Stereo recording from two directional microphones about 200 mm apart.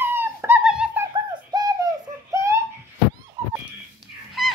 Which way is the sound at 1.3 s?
20° right (ahead or behind).